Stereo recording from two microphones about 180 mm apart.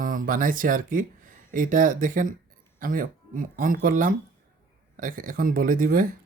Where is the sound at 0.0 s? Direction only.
50° right (ahead or behind).